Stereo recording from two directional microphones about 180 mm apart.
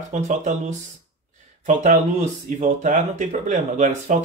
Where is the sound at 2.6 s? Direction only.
45° right (ahead or behind).